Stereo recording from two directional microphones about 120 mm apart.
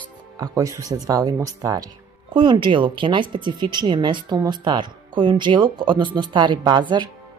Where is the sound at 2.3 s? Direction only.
45° right (ahead or behind).